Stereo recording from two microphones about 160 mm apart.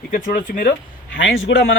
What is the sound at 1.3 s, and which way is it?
Speech, 90° left.